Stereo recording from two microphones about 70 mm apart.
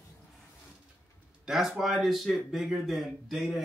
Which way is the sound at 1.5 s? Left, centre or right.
Centre.